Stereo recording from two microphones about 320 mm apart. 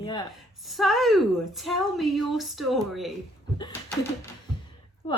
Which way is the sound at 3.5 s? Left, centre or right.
Centre.